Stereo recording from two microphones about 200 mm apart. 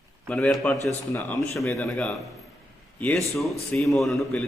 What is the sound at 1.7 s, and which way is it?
A man's voice, centre (ahead or behind).